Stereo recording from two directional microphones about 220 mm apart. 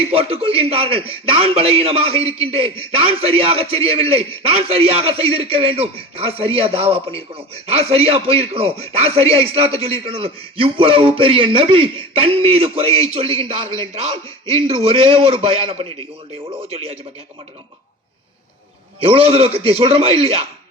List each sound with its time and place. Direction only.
0.0 s a man's voice: 25° right (ahead or behind)
18.9 s a man's voice: 25° right (ahead or behind)